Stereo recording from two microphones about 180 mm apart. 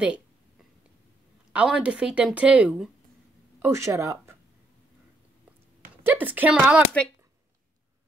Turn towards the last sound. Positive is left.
turn(degrees=-5)  # may be behind; listen again after turning